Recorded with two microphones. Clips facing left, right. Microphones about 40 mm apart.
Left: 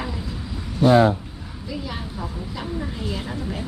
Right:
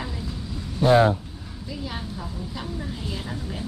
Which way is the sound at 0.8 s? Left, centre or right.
Left.